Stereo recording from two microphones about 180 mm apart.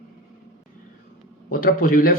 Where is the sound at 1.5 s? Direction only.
50° left (ahead or behind).